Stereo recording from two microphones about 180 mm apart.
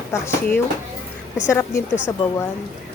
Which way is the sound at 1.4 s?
15° left (ahead or behind).